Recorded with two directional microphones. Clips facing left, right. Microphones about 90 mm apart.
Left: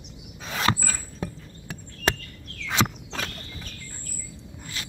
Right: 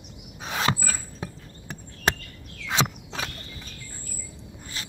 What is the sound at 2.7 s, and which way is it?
Walk, 15° right (ahead or behind).